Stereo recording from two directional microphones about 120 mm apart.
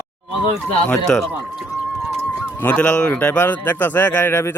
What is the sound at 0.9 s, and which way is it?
Speech, 5° left (ahead or behind).